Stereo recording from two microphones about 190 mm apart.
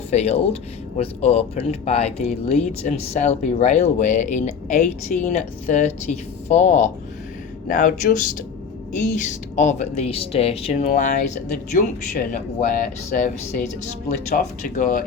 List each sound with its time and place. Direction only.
0.1 s speech: 35° left (ahead or behind)
9.1 s speech: 40° left (ahead or behind)
14.3 s speech: 45° left (ahead or behind)